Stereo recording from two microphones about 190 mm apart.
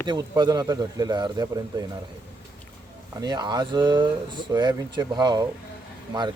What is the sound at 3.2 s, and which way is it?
Speech, 20° right (ahead or behind).